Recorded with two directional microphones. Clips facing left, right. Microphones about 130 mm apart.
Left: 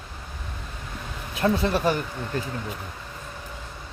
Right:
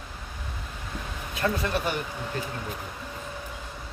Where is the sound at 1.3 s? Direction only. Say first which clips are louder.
Left 4 dB; 25° left (ahead or behind).